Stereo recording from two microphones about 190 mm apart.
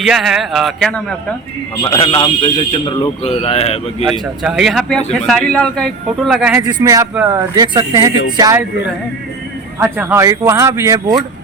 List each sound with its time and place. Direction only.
0.0 s a man's voice: centre (ahead or behind)
1.8 s a man's voice: 25° left (ahead or behind)
4.0 s a man's voice: centre (ahead or behind)
6.7 s speech: 20° right (ahead or behind)
9.8 s speech: 10° right (ahead or behind)